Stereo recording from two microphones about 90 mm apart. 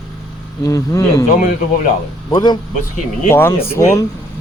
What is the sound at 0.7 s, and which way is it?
Speech, 40° left (ahead or behind).